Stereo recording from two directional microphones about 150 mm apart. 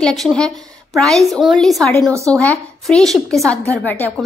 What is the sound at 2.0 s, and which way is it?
Speech, 20° right (ahead or behind).